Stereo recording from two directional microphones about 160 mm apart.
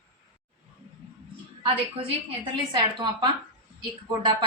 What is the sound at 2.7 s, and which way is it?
Speech, 30° right (ahead or behind).